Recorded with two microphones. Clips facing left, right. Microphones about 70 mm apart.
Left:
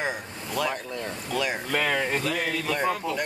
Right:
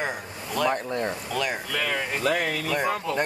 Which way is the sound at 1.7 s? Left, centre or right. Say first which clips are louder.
Left 3 dB; left.